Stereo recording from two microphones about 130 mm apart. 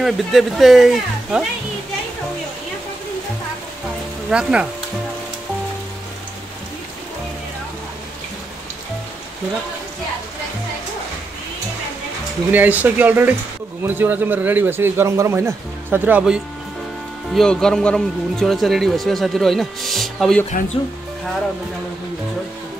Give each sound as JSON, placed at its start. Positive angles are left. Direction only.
{"t": 0.0, "sound": "speech", "side_deg": 0}
{"t": 4.3, "sound": "a man's voice", "side_deg": -5}
{"t": 12.4, "sound": "a man's voice", "side_deg": -15}
{"t": 17.3, "sound": "speech", "side_deg": 5}